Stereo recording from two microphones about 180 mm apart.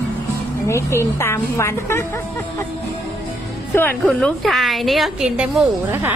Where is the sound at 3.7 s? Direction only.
10° left (ahead or behind); by 6.1 s 10° right (ahead or behind).